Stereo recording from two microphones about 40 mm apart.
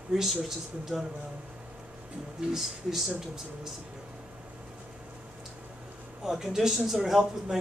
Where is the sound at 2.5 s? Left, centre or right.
Centre.